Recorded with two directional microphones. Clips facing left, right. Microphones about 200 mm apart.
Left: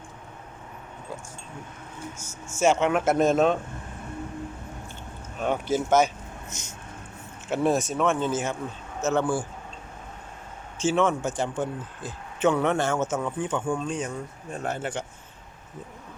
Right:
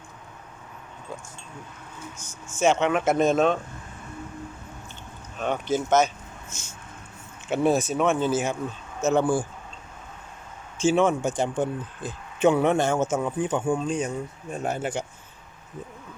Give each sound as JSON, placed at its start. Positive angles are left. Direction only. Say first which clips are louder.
{"t": 2.5, "sound": "speech", "louder": "even", "side_deg": 10}
{"t": 5.4, "sound": "speech", "louder": "even", "side_deg": 10}
{"t": 7.5, "sound": "speech", "louder": "right 2 dB", "side_deg": 0}
{"t": 10.8, "sound": "speech", "louder": "right 2 dB", "side_deg": -10}